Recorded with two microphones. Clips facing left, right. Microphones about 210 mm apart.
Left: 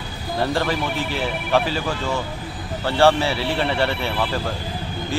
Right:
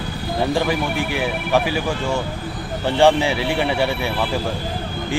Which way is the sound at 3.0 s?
15° right (ahead or behind).